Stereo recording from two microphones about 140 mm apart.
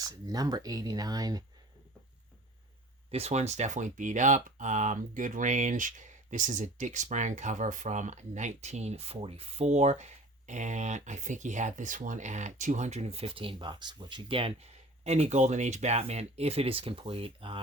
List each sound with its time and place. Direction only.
0.0 s speech: 25° right (ahead or behind)
3.1 s speech: 50° right (ahead or behind)